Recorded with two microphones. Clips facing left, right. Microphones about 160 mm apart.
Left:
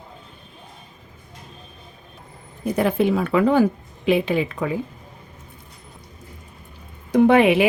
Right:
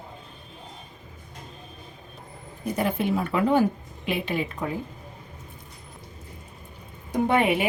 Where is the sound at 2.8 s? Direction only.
90° left.